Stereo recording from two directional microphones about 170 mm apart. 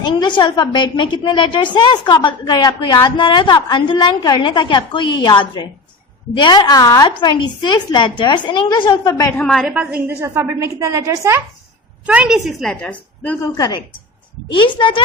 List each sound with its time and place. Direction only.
0.0 s a woman's voice: 25° left (ahead or behind)
9.4 s a woman's voice: centre (ahead or behind); by 11.4 s 15° right (ahead or behind)
12.0 s a woman's voice: 5° right (ahead or behind)
14.8 s a woman's voice: 30° left (ahead or behind)